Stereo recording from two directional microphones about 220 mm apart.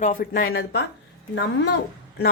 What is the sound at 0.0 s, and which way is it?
Speech, 40° left (ahead or behind).